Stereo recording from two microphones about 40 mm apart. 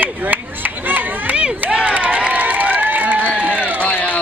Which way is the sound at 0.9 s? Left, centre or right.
Right.